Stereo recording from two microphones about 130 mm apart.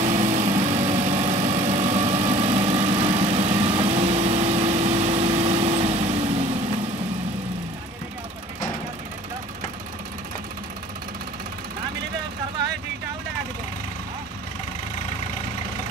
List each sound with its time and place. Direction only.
0.0 s vehicle: 60° right (ahead or behind)